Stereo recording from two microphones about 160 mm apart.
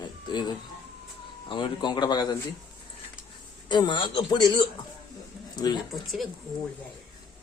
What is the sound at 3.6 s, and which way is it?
Speech, 30° left (ahead or behind).